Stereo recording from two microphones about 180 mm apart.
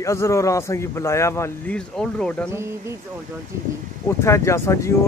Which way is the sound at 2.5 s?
15° right (ahead or behind).